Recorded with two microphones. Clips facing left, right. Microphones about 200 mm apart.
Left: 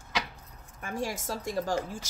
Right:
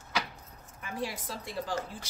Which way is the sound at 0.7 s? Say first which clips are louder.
Left 3 dB; 45° left (ahead or behind).